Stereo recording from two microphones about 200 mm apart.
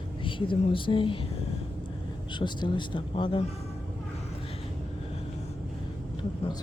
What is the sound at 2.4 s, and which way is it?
Speech, 25° left (ahead or behind).